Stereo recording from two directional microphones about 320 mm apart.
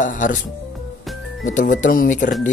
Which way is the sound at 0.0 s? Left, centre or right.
Left.